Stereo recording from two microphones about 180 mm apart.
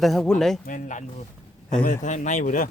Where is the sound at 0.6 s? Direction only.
45° left (ahead or behind).